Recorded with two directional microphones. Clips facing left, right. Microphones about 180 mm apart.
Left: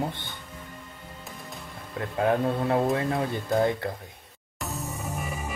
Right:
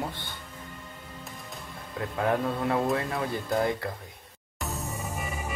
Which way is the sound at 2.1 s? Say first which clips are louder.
Left 3 dB; 30° left (ahead or behind).